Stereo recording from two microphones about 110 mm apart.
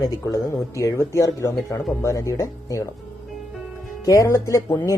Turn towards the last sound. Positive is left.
turn(degrees=30)  # may be behind; listen again after turning